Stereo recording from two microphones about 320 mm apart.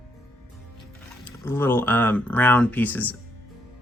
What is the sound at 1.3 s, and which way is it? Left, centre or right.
Speech, centre.